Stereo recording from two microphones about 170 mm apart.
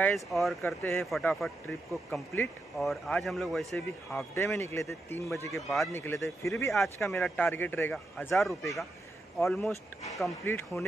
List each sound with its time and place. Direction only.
0.0 s speech: centre (ahead or behind)
0.6 s speech: 15° left (ahead or behind)
1.2 s speech: centre (ahead or behind)
4.4 s speech: 15° left (ahead or behind)
5.5 s speech: centre (ahead or behind)
5.9 s speech: 15° left (ahead or behind)
6.7 s speech: centre (ahead or behind)
9.4 s speech: 15° left (ahead or behind)